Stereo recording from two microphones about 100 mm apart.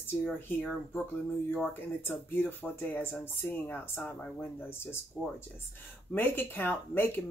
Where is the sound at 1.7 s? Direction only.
20° left (ahead or behind).